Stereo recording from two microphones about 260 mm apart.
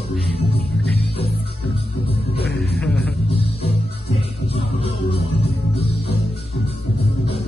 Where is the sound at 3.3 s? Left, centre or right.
Left.